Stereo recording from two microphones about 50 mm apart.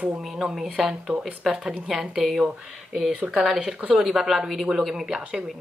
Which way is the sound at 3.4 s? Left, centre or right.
Centre.